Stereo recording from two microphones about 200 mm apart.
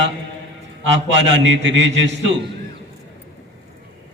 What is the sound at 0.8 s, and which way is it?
A man's voice, 65° right (ahead or behind).